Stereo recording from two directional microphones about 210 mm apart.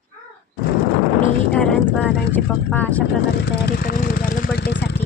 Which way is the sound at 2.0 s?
5° left (ahead or behind).